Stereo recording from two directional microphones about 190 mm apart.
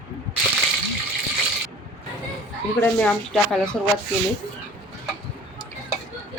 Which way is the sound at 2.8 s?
5° left (ahead or behind).